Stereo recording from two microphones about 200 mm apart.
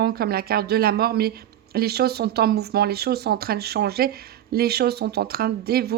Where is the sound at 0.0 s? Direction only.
50° right (ahead or behind).